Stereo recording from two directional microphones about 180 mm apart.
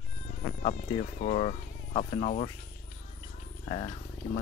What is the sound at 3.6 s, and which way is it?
Speech, 35° left (ahead or behind).